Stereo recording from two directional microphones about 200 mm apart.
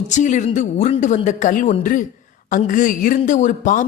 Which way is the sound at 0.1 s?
35° left (ahead or behind).